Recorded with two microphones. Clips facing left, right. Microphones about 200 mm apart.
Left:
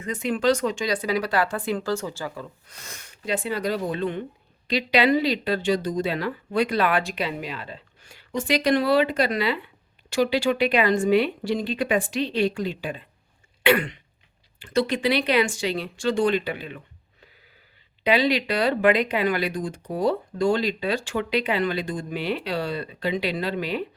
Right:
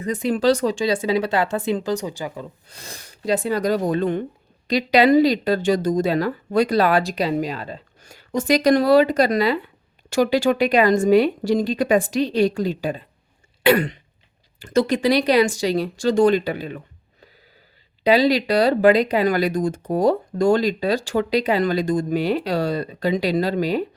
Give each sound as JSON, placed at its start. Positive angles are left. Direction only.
{"t": 0.0, "sound": "speech", "side_deg": -35}
{"t": 2.6, "sound": "speech", "side_deg": -30}
{"t": 13.6, "sound": "throat clearing", "side_deg": -40}
{"t": 14.6, "sound": "speech", "side_deg": -45}
{"t": 18.0, "sound": "speech", "side_deg": -35}